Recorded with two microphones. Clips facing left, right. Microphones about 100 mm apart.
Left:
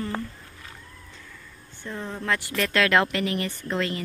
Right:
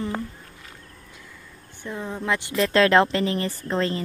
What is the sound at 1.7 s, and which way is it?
A woman's voice, 15° right (ahead or behind).